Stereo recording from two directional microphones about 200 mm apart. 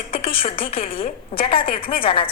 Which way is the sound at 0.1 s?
30° left (ahead or behind).